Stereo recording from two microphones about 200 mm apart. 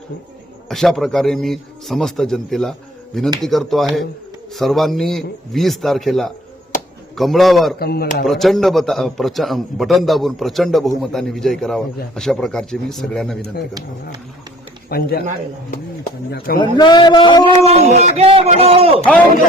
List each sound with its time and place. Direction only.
0.7 s a man's voice: centre (ahead or behind)
7.8 s speech: 50° left (ahead or behind)
8.2 s a man's voice: centre (ahead or behind)
14.8 s speech: 50° left (ahead or behind)
16.6 s a man's voice: 20° left (ahead or behind)
17.4 s speech: 30° right (ahead or behind)